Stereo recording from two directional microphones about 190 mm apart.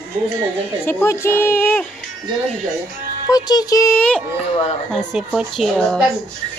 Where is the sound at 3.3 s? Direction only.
20° left (ahead or behind); by 6.0 s centre (ahead or behind).